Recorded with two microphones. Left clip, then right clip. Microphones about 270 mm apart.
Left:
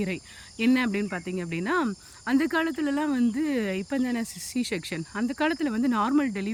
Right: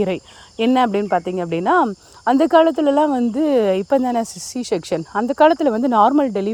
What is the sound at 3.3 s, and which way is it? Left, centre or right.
Speech, right.